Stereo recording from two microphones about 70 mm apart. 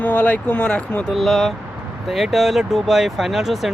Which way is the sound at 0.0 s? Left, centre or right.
Left.